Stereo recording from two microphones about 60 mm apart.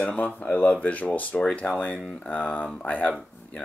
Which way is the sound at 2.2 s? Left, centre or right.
Left.